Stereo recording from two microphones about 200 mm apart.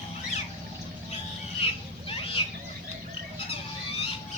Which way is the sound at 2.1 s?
25° left (ahead or behind).